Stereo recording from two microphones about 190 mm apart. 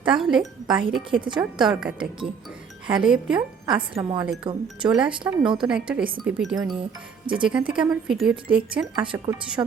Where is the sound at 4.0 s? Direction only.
20° right (ahead or behind).